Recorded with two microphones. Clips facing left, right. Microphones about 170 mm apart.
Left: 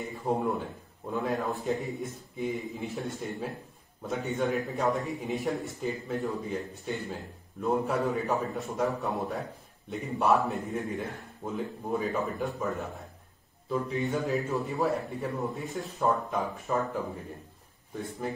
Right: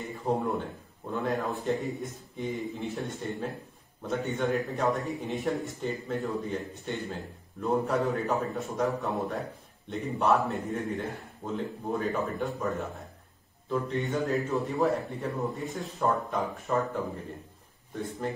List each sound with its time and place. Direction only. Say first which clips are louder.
0.1 s a man's voice: right 1 dB; centre (ahead or behind)